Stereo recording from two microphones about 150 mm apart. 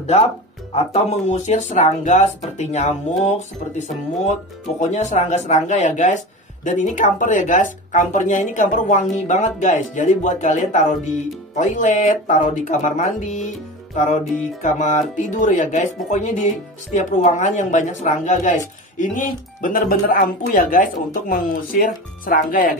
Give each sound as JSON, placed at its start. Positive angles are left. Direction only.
{"t": 0.9, "sound": "speech", "side_deg": 50}